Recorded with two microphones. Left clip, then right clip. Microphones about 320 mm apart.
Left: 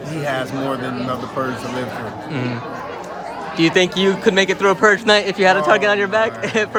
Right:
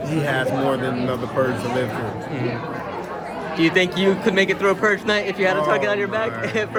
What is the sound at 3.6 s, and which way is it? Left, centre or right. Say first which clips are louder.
Speech: left 3 dB; left.